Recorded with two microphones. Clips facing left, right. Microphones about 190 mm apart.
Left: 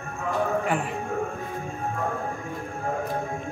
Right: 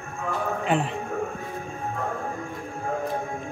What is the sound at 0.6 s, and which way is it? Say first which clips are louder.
Music: right 2 dB; 25° right (ahead or behind).